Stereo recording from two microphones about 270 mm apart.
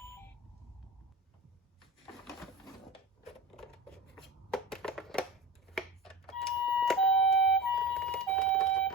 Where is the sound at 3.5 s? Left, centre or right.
Centre.